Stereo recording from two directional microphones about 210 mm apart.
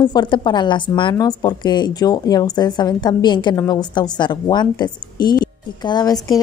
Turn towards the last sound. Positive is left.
turn(degrees=20)  # may be behind; listen again after turning